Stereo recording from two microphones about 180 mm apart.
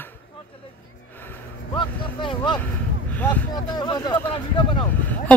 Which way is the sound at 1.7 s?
25° left (ahead or behind).